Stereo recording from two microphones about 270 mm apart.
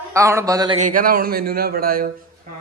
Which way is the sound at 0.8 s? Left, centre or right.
Right.